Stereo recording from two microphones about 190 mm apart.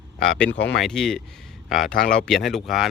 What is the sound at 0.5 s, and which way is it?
Speech, 65° left (ahead or behind).